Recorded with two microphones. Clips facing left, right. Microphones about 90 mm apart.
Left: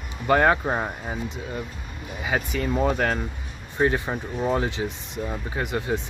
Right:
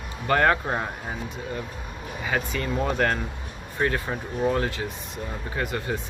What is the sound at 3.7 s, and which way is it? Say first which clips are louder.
Speech: left 3 dB; 20° left (ahead or behind).